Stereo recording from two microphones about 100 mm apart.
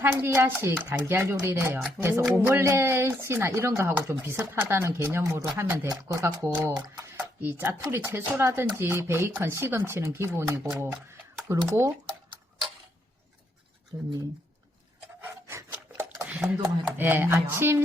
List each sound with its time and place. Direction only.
0.0 s speech: 20° right (ahead or behind)
7.4 s speech: 20° right (ahead or behind)
13.9 s speech: 40° right (ahead or behind)
15.2 s rub: 20° right (ahead or behind)
17.0 s speech: 20° right (ahead or behind)